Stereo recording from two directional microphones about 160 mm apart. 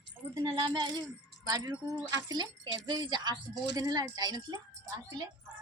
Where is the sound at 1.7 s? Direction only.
10° right (ahead or behind).